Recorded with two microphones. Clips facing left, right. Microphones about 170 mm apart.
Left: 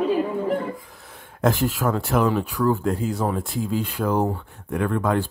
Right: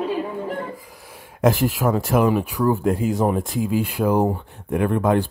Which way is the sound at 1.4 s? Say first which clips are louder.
Right 3 dB; 10° right (ahead or behind).